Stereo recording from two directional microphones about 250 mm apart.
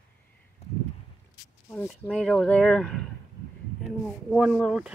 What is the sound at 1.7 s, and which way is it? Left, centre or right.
Speech, centre.